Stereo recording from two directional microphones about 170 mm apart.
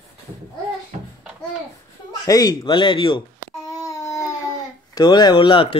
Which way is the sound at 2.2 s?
20° left (ahead or behind).